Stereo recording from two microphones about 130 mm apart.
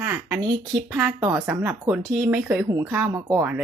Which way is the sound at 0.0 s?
15° right (ahead or behind).